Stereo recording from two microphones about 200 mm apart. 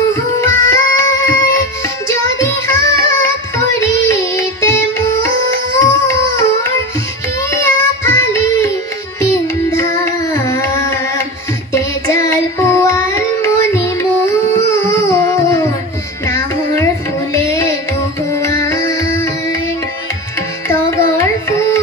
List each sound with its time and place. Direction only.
0.1 s music: 15° left (ahead or behind)
2.0 s child singing: 15° left (ahead or behind)
5.8 s a sound: 15° left (ahead or behind)
7.5 s child singing: 15° left (ahead or behind)
9.2 s music: 15° left (ahead or behind)
11.7 s child singing: 15° left (ahead or behind)
14.2 s a sound: 15° left (ahead or behind)
16.3 s music: 15° left (ahead or behind)
20.6 s music: 15° left (ahead or behind)